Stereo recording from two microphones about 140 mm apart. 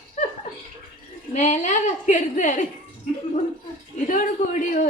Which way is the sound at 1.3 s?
60° left (ahead or behind).